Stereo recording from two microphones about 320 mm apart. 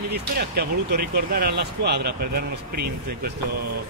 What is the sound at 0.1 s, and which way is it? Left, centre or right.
Speech, right.